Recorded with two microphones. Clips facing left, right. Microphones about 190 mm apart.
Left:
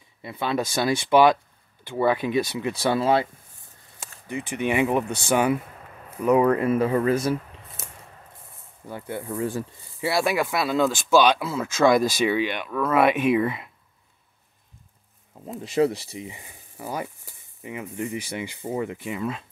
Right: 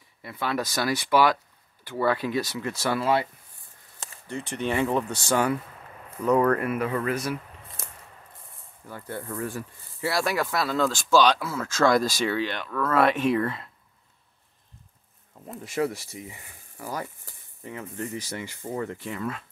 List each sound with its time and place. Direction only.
0.2 s speech: 20° left (ahead or behind)
4.0 s speech: 15° left (ahead or behind)
6.7 s speech: 30° left (ahead or behind)
7.8 s a sound: 20° left (ahead or behind)
8.8 s speech: 20° left (ahead or behind)
15.6 s speech: 25° left (ahead or behind)